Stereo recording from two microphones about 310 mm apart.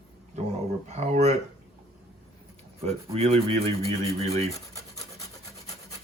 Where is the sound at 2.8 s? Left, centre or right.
Centre.